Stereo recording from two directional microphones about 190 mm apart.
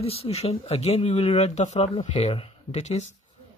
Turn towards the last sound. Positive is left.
turn(degrees=35)  # may be behind; listen again after turning